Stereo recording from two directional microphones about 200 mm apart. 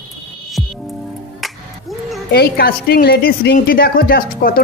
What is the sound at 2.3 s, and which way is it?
A woman's voice, 50° left (ahead or behind).